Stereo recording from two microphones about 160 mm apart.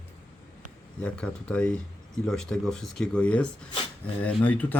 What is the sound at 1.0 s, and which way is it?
Speech, 5° left (ahead or behind).